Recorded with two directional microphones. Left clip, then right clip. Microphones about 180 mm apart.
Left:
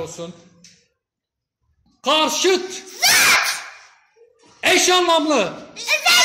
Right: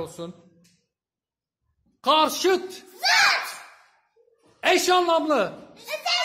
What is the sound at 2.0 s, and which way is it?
Speech, 15° right (ahead or behind).